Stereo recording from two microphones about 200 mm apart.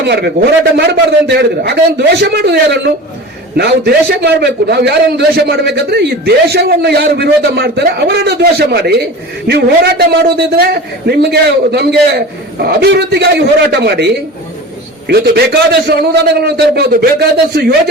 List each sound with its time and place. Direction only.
0.0 s a man's voice: 55° right (ahead or behind)